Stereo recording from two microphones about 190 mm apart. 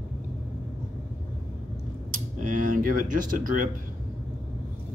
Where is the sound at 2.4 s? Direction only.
45° right (ahead or behind).